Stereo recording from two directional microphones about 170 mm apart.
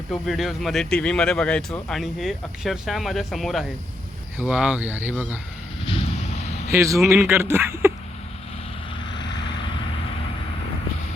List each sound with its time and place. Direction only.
0.1 s speech: centre (ahead or behind)
6.7 s speech: 15° right (ahead or behind)